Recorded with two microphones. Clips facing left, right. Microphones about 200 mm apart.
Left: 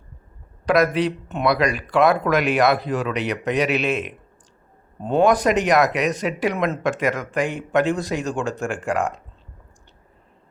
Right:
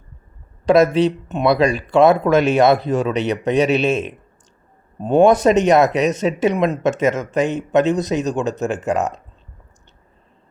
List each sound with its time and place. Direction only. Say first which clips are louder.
0.6 s speech: right 5 dB; 25° right (ahead or behind)